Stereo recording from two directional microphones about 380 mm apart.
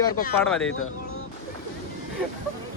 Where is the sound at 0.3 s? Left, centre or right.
Centre.